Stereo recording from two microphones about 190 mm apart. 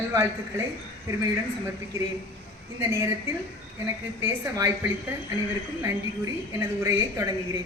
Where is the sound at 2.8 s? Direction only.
15° right (ahead or behind).